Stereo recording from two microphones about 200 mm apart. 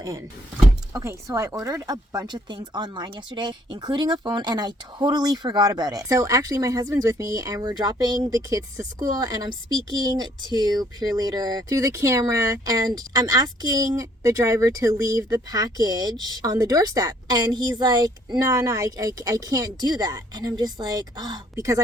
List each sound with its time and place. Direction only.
0.9 s speech: 15° right (ahead or behind)